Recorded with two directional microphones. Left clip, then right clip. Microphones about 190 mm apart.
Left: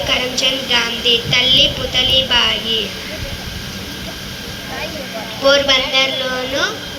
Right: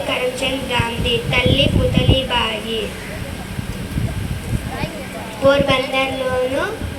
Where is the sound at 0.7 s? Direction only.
55° right (ahead or behind).